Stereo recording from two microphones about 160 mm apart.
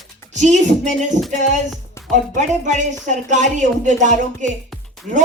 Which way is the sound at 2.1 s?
50° right (ahead or behind).